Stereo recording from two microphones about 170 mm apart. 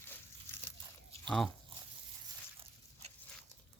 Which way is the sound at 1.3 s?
Centre (ahead or behind).